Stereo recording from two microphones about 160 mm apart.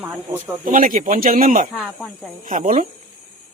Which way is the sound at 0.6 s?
55° right (ahead or behind).